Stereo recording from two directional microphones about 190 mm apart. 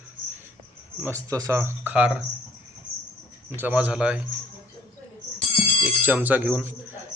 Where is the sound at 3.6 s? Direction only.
5° right (ahead or behind).